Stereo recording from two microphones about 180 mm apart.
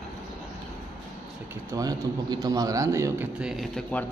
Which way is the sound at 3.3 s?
5° right (ahead or behind).